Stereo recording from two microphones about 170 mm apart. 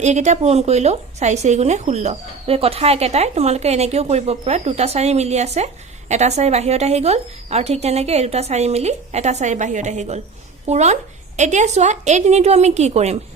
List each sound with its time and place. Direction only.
0.0 s speech: 40° right (ahead or behind)